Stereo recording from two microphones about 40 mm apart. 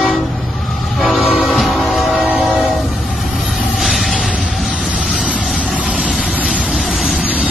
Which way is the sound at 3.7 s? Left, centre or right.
Centre.